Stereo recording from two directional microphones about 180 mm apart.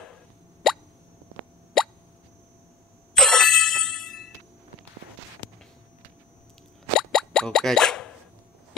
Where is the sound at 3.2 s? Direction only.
5° left (ahead or behind).